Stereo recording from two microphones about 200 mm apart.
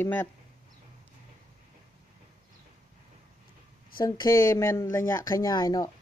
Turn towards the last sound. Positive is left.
turn(degrees=20)  # may be behind; listen again after turning